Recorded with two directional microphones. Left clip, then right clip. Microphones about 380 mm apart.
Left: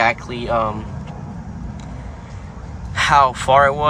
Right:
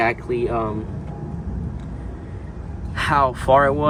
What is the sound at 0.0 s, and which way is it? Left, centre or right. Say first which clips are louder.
Speech: left 2 dB; centre.